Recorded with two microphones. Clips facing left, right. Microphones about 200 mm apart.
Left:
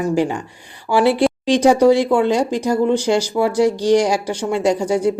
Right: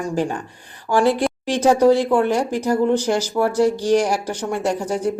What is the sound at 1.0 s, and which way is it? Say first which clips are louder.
Speech: left 3 dB; 70° left (ahead or behind).